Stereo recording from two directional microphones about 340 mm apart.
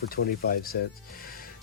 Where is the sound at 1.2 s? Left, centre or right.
Left.